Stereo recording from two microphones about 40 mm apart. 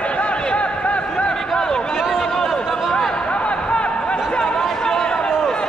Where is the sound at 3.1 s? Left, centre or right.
Left.